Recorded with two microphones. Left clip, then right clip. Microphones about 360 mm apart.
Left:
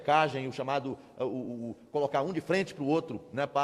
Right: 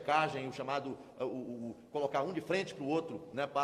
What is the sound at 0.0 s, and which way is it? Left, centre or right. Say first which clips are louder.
A man's voice: left 6 dB; left.